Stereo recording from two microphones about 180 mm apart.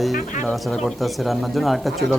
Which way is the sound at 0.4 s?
Centre (ahead or behind).